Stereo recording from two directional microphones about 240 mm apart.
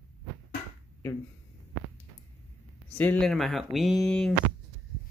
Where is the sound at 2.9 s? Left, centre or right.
Centre.